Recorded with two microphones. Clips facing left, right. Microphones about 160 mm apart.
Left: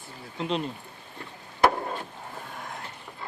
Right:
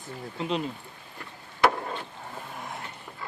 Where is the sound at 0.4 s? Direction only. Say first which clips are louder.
Left 1 dB; centre (ahead or behind).